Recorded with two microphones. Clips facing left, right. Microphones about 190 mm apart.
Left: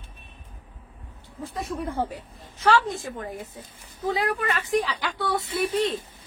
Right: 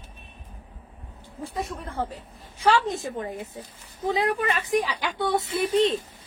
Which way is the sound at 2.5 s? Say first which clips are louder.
Even; 15° right (ahead or behind).